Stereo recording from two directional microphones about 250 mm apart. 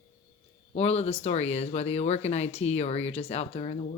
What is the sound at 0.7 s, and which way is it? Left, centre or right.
Speech, left.